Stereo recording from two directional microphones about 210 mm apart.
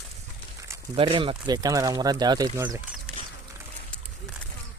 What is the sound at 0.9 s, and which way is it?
Speech, 25° right (ahead or behind).